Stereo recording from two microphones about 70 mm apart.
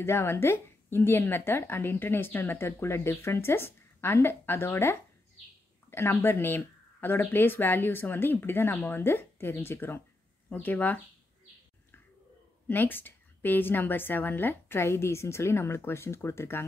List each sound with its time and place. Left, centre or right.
0.0 s a woman's voice: left
12.6 s a woman's voice: left